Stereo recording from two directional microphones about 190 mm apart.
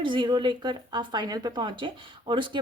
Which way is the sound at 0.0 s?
25° right (ahead or behind).